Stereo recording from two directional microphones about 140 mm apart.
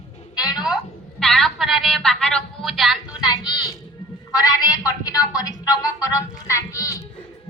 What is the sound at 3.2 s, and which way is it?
A man's voice, 30° left (ahead or behind).